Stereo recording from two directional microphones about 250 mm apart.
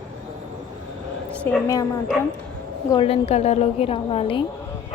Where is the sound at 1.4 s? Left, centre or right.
Centre.